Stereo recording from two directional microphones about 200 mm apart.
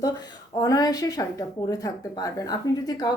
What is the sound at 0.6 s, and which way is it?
A woman's voice, 20° left (ahead or behind).